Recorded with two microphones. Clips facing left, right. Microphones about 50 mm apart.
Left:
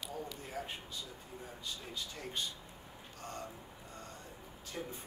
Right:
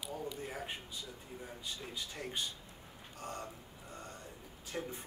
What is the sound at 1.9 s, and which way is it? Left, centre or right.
Speech, centre.